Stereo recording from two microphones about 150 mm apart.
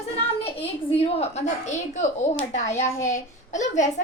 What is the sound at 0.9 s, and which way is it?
A woman's voice, 45° left (ahead or behind).